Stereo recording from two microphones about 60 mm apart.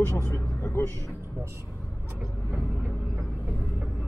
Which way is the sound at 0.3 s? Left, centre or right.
Left.